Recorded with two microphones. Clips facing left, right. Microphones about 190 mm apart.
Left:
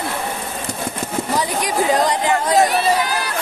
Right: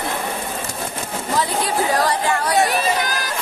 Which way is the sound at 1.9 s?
20° left (ahead or behind).